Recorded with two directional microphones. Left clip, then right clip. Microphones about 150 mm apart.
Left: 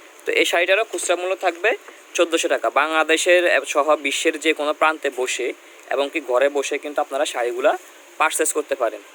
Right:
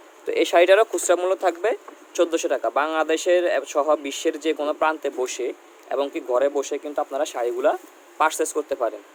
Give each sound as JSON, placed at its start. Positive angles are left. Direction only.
{"t": 0.3, "sound": "speech", "side_deg": -5}
{"t": 0.9, "sound": "speech", "side_deg": -40}
{"t": 1.6, "sound": "speech", "side_deg": -10}